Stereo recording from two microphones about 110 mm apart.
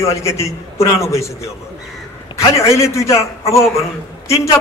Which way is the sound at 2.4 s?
25° left (ahead or behind).